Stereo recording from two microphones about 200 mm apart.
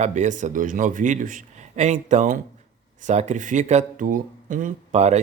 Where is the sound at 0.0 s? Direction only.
35° right (ahead or behind).